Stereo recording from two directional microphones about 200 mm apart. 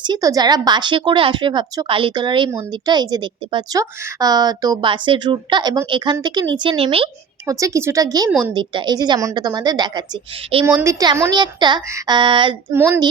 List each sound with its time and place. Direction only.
0.0 s a woman's voice: 20° right (ahead or behind)
7.5 s speech: 15° right (ahead or behind)
8.3 s a woman's voice: 5° right (ahead or behind)
8.5 s a woman's voice: 20° right (ahead or behind)
12.7 s speech: 10° right (ahead or behind)